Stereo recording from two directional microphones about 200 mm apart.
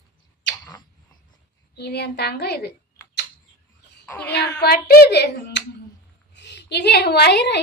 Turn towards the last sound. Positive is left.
turn(degrees=60)  # may be behind; listen again after turning